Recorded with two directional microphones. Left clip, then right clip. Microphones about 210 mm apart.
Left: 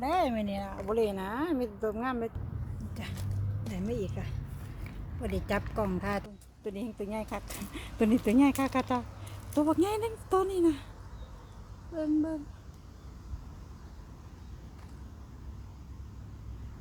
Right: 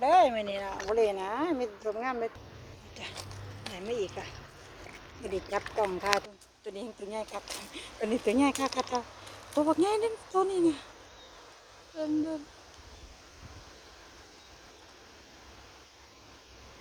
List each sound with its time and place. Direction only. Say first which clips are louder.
0.0 s speech: right 6 dB; centre (ahead or behind)
0.5 s speech: right 3 dB; 20° right (ahead or behind)
0.9 s speech: right 2 dB; 5° left (ahead or behind)